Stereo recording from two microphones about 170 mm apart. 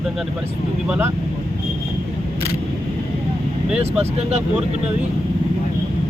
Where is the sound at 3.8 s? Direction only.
40° right (ahead or behind).